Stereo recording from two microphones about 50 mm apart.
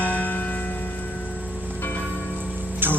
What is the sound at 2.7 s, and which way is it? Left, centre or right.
Vehicle, right.